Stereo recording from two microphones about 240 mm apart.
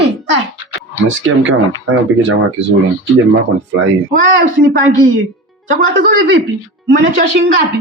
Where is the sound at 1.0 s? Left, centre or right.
Right.